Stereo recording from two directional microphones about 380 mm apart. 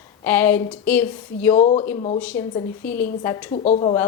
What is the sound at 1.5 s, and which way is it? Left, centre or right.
Speech, centre.